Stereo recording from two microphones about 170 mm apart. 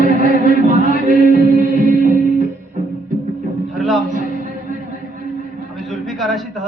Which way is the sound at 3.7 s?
Centre (ahead or behind).